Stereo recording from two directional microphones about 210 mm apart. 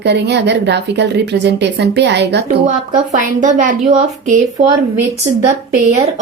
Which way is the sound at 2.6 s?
35° right (ahead or behind).